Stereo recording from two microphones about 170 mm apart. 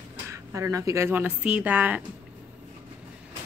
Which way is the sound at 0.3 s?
15° right (ahead or behind).